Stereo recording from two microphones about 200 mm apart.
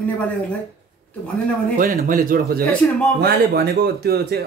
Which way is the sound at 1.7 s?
45° right (ahead or behind).